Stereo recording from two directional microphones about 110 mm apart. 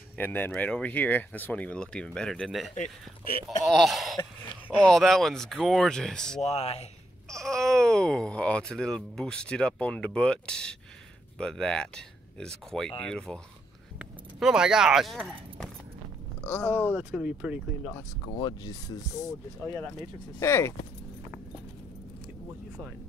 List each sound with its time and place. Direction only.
0.2 s speech: 15° left (ahead or behind)
6.4 s speech: 65° left (ahead or behind)
7.2 s speech: 5° left (ahead or behind)
13.9 s speech: 5° right (ahead or behind)
16.4 s speech: 15° left (ahead or behind)
16.9 s speech: 10° right (ahead or behind)
18.2 s speech: 40° left (ahead or behind)
20.3 s speech: 25° left (ahead or behind)